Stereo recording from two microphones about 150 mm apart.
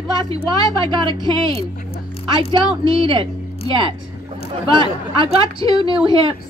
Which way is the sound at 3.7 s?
35° right (ahead or behind).